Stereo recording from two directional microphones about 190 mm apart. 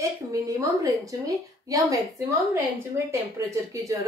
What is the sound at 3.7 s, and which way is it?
Speech, 15° right (ahead or behind).